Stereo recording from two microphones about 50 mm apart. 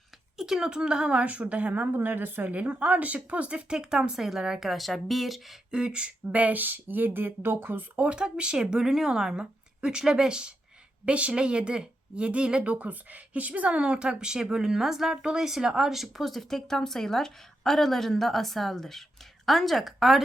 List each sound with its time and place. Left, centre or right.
0.3 s a woman's voice: centre; by 2.6 s right
2.6 s speech: right; by 5.5 s centre
5.7 s a woman's voice: centre; by 7.9 s right
7.9 s a woman's voice: right
12.7 s speech: right; by 20.2 s centre